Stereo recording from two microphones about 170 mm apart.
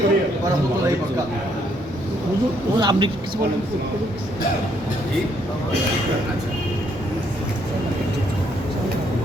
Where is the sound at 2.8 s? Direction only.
30° right (ahead or behind).